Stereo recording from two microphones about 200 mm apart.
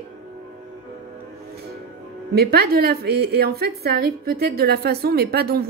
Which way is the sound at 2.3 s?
50° right (ahead or behind).